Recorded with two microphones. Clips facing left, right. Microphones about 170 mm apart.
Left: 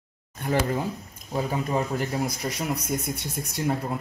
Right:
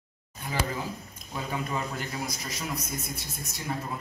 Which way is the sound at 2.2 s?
55° left (ahead or behind).